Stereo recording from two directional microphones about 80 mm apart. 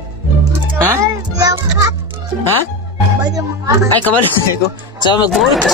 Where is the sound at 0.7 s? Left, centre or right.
Right.